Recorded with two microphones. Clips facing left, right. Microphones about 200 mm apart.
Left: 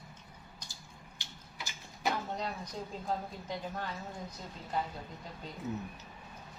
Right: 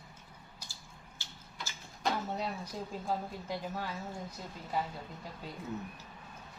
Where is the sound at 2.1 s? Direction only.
5° right (ahead or behind).